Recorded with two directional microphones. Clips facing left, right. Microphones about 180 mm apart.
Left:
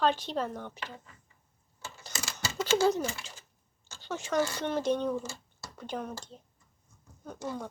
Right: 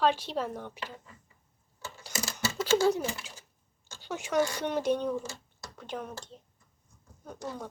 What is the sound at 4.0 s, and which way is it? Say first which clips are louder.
A child's voice: right 1 dB; 15° right (ahead or behind).